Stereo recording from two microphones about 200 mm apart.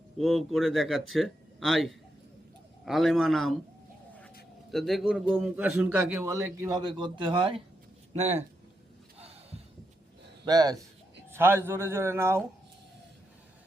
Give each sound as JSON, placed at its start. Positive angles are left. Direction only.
{"t": 0.2, "sound": "speech", "side_deg": 0}
{"t": 4.7, "sound": "a man's voice", "side_deg": 0}
{"t": 9.1, "sound": "a sound", "side_deg": -30}
{"t": 10.4, "sound": "a man's voice", "side_deg": -20}